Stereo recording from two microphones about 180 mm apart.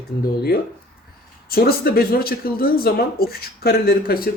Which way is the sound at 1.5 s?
55° left (ahead or behind).